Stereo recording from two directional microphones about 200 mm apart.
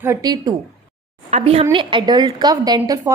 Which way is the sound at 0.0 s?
15° right (ahead or behind).